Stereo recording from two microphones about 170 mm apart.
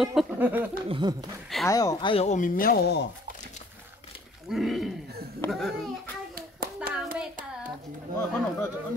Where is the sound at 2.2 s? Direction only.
50° left (ahead or behind); by 3.1 s 80° left.